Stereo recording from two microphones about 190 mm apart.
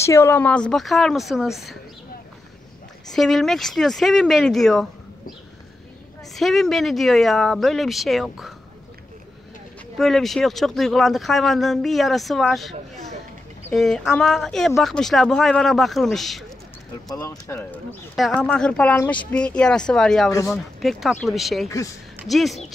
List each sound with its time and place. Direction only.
0.0 s speech: 15° left (ahead or behind); by 1.8 s centre (ahead or behind)
3.1 s speech: centre (ahead or behind)
6.3 s speech: centre (ahead or behind)
9.9 s speech: centre (ahead or behind)
13.7 s speech: centre (ahead or behind)
17.1 s speech: 15° left (ahead or behind)
18.1 s speech: centre (ahead or behind)
20.2 s speech: 15° left (ahead or behind)
20.5 s speech: centre (ahead or behind)
21.6 s speech: 15° left (ahead or behind)
22.2 s speech: centre (ahead or behind)